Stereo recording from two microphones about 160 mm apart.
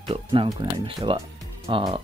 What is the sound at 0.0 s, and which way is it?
Speech, 35° right (ahead or behind).